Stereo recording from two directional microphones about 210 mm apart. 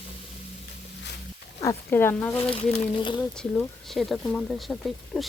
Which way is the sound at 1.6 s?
10° left (ahead or behind).